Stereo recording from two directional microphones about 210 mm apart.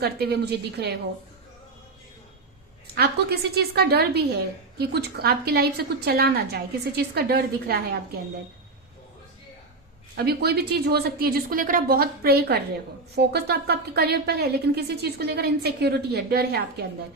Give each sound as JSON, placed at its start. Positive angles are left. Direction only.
{"t": 0.0, "sound": "speech", "side_deg": -50}
{"t": 2.9, "sound": "speech", "side_deg": -50}
{"t": 10.2, "sound": "speech", "side_deg": -50}